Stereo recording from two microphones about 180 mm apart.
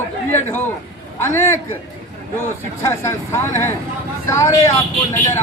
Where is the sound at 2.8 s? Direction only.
15° left (ahead or behind).